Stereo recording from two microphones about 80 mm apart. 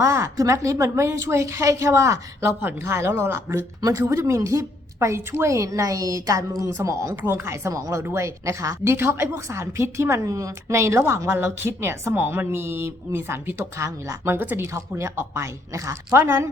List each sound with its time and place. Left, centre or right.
0.0 s a woman's voice: right
3.8 s a woman's voice: right
7.2 s a woman's voice: right